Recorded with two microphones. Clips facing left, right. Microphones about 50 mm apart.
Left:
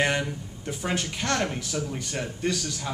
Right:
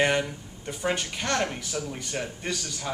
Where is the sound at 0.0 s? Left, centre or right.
Centre.